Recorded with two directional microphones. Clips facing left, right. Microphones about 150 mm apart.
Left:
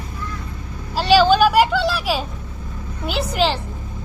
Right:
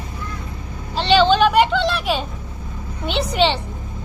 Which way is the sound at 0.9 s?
5° left (ahead or behind).